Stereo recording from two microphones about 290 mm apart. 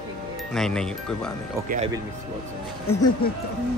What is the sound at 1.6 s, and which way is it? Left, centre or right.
Speech, right.